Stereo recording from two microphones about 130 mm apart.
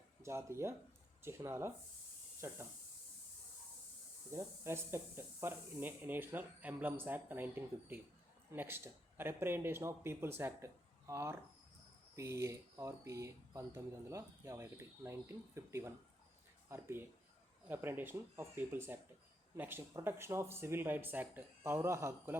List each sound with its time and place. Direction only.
0.2 s speech: 20° right (ahead or behind)
4.3 s speech: 20° right (ahead or behind)